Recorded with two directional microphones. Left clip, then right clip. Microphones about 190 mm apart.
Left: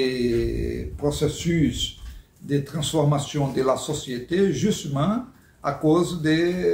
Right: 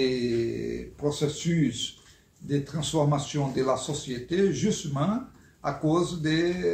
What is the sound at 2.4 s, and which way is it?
Speech, 10° left (ahead or behind).